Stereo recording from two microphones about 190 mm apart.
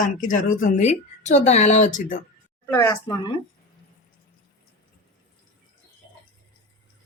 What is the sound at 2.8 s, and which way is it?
Speech, 15° left (ahead or behind).